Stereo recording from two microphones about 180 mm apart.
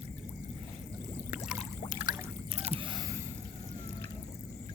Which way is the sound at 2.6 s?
35° right (ahead or behind).